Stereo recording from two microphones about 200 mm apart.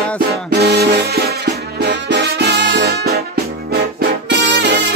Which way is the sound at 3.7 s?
50° right (ahead or behind).